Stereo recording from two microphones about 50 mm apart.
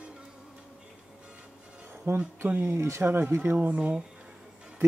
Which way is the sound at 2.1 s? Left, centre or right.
Right.